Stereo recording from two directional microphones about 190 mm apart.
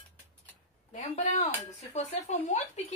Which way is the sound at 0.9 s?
35° left (ahead or behind).